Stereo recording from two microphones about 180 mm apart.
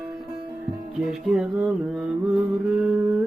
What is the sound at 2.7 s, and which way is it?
Humming, 5° right (ahead or behind).